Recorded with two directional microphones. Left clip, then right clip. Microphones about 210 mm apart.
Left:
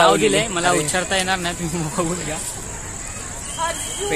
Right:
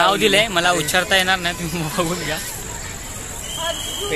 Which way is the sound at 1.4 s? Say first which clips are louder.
Right 2 dB; 10° left (ahead or behind).